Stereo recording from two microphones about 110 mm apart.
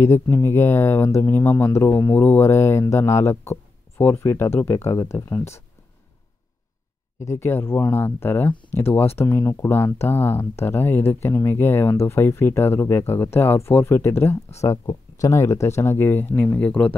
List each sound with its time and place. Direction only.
0.0 s speech: 20° left (ahead or behind)
7.2 s speech: 25° left (ahead or behind)